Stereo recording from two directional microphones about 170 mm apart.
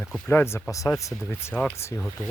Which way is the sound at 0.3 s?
15° left (ahead or behind).